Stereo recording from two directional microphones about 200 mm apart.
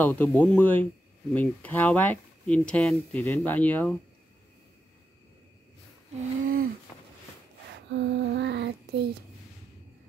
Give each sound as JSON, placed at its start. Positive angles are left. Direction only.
{"t": 0.0, "sound": "speech", "side_deg": 10}
{"t": 6.4, "sound": "a sound", "side_deg": -45}
{"t": 7.7, "sound": "child singing", "side_deg": -60}